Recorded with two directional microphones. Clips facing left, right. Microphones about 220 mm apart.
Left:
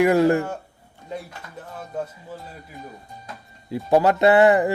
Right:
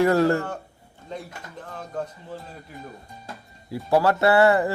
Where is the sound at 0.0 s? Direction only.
15° left (ahead or behind).